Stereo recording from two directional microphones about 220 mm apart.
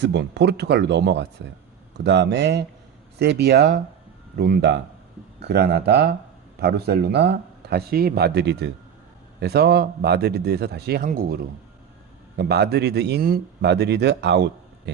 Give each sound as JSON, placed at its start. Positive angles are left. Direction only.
{"t": 0.0, "sound": "speech", "side_deg": -50}
{"t": 12.4, "sound": "speech", "side_deg": -45}